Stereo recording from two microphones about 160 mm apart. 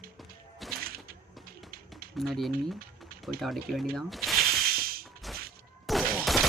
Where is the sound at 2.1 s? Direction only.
Centre (ahead or behind).